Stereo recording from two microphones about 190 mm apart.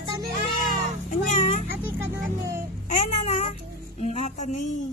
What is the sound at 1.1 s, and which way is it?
Speech, 40° left (ahead or behind).